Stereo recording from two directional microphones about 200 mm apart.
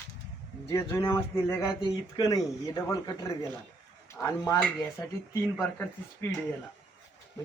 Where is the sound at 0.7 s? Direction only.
10° left (ahead or behind).